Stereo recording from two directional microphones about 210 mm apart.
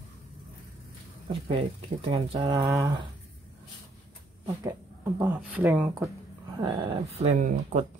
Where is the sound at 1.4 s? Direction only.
25° right (ahead or behind).